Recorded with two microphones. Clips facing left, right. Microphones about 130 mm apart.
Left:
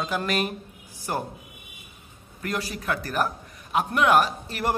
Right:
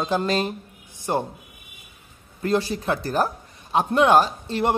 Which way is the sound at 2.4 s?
30° right (ahead or behind).